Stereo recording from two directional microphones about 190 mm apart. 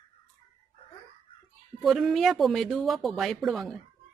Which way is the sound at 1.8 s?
Centre (ahead or behind).